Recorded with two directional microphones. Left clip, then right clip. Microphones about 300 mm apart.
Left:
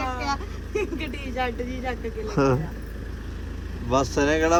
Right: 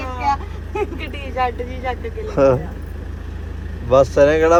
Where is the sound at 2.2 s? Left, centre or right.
Centre.